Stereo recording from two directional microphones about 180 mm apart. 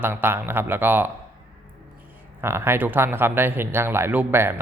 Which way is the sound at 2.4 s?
15° right (ahead or behind).